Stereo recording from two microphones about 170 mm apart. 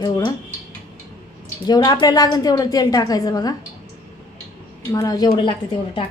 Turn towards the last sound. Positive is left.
turn(degrees=30)  # may be behind; listen again after turning